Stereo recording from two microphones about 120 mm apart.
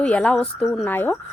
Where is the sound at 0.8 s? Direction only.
15° left (ahead or behind).